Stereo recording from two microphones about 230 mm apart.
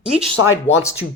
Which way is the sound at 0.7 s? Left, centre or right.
Left.